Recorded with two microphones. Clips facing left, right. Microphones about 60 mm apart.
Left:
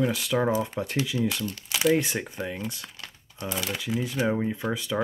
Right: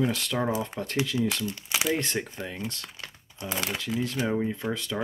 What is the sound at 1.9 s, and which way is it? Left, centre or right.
Speech, centre.